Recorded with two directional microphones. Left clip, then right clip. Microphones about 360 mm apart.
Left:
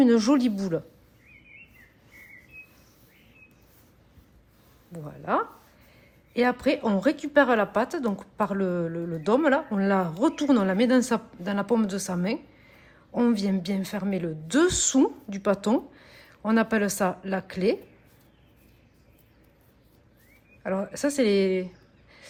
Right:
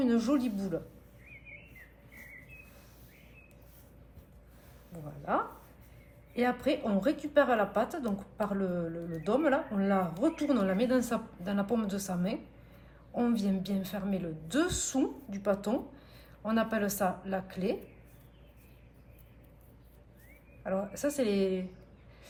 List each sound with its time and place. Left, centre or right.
0.0 s a woman's voice: left
5.2 s a woman's voice: left
20.7 s a woman's voice: left